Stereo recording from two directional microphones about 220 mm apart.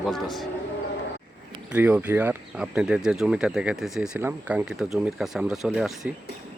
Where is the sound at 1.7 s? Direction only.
5° right (ahead or behind).